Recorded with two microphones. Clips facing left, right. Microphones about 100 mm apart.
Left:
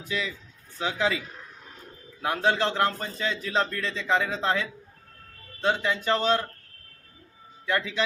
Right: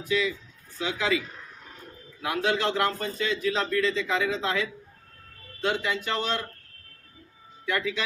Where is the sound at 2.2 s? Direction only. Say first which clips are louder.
Left 1 dB; 35° left (ahead or behind).